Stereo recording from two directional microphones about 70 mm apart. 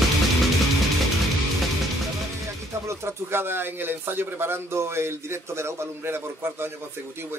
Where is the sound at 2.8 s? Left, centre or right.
Right.